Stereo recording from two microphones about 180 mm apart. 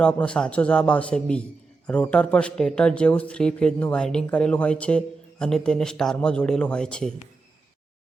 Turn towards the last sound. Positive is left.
turn(degrees=5)  # may be behind; listen again after turning